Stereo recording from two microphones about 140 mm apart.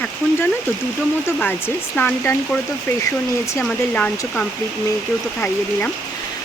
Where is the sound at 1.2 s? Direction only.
15° left (ahead or behind).